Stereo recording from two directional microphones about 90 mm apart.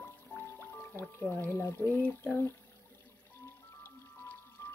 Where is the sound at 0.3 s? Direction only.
25° left (ahead or behind).